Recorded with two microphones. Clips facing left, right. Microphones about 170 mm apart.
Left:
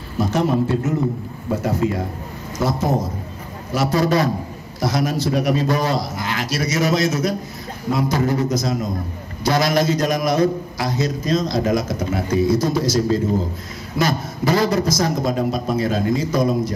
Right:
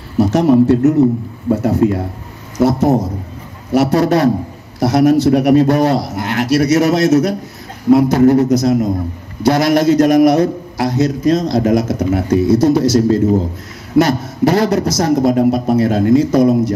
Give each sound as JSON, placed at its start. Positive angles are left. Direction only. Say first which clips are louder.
{"t": 0.2, "sound": "a man's voice", "louder": "right 8 dB", "side_deg": -70}